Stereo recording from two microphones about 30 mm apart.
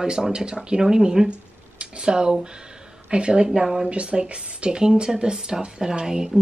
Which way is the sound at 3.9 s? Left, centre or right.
Right.